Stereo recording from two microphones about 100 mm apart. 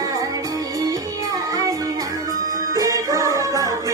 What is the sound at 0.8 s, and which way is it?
Music, 35° right (ahead or behind).